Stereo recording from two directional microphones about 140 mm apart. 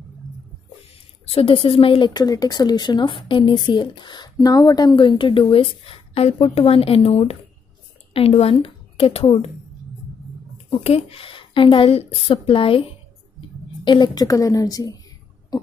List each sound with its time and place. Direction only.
1.2 s a woman's voice: 40° left (ahead or behind)
10.7 s a woman's voice: 45° left (ahead or behind); by 15.0 s 25° left (ahead or behind)